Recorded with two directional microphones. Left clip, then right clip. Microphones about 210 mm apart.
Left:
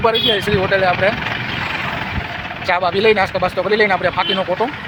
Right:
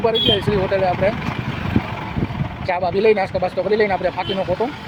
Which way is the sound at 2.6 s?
5° right (ahead or behind).